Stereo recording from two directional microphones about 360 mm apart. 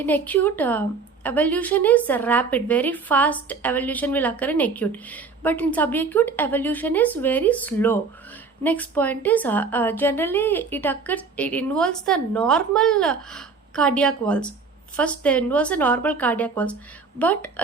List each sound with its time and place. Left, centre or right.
0.0 s a woman's voice: centre